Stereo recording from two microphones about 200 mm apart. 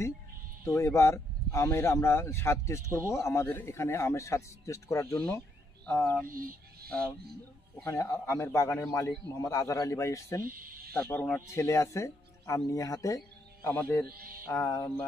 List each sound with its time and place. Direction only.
0.7 s a man's voice: 15° left (ahead or behind)
6.2 s speech: 45° right (ahead or behind)
7.7 s a man's voice: 10° left (ahead or behind)
10.4 s speech: 45° right (ahead or behind)
10.9 s a man's voice: 10° left (ahead or behind)